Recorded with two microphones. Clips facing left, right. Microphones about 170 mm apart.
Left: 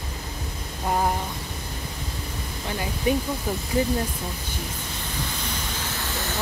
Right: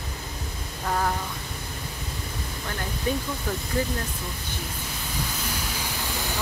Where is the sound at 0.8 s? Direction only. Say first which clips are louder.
Left 3 dB; 25° left (ahead or behind).